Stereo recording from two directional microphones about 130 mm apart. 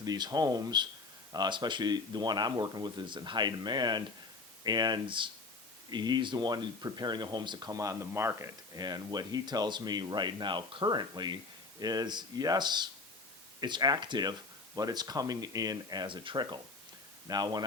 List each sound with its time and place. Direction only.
0.0 s speech: 30° right (ahead or behind)
8.8 s speech: 30° right (ahead or behind)